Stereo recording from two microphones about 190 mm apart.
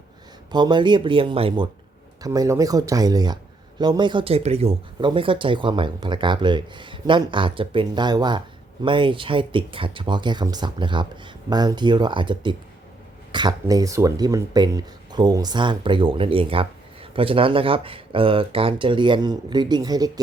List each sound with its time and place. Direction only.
0.5 s speech: 25° right (ahead or behind)